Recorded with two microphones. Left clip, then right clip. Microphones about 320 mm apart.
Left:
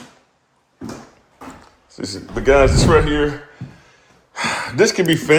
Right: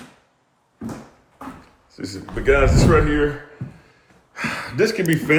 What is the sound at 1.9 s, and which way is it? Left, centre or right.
Speech, centre.